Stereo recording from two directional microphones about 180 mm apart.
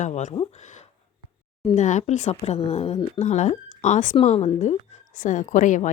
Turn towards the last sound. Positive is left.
turn(degrees=45)  # may be behind; listen again after turning